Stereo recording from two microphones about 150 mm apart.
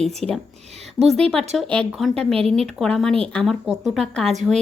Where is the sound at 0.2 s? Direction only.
5° left (ahead or behind).